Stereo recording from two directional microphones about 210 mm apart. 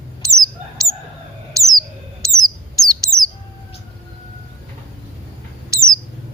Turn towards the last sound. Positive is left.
turn(degrees=-15)  # may be behind; listen again after turning